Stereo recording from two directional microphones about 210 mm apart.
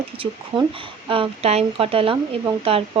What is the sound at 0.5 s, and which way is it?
Speech, 20° right (ahead or behind).